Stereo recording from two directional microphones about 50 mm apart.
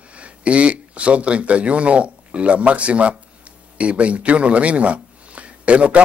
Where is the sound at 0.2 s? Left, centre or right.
Right.